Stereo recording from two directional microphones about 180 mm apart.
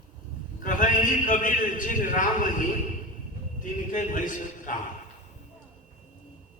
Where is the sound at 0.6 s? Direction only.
45° left (ahead or behind).